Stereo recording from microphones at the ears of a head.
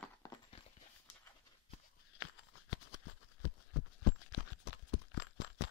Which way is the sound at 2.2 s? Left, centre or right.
Left.